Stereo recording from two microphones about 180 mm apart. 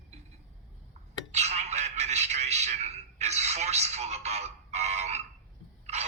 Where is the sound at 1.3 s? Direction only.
40° right (ahead or behind).